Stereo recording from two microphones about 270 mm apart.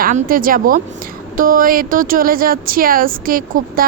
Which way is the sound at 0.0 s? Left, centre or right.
Right.